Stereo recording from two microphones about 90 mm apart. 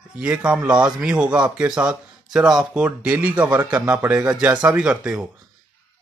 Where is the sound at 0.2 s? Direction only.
15° right (ahead or behind).